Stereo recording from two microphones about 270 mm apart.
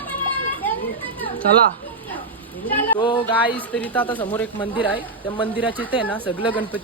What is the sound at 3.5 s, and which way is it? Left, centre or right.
Speech, centre.